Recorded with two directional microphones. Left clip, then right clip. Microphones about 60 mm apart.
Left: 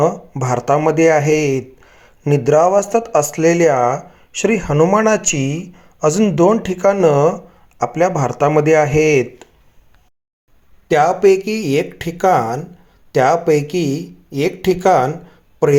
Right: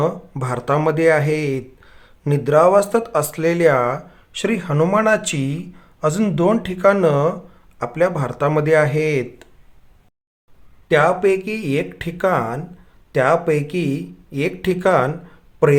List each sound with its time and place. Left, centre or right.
0.0 s a man's voice: left
4.7 s speech: centre
5.0 s speech: left
5.7 s a sound: left
6.7 s speech: left
7.0 s speech: left
10.8 s speech: left
15.3 s a sound: left